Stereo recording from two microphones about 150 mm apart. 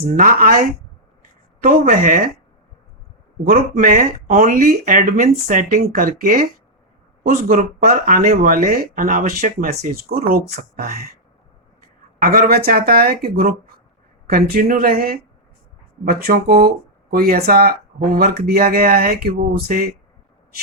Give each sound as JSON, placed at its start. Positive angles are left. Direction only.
{"t": 0.1, "sound": "speech", "side_deg": -65}
{"t": 3.4, "sound": "speech", "side_deg": -70}
{"t": 12.2, "sound": "speech", "side_deg": -75}
{"t": 16.0, "sound": "speech", "side_deg": -70}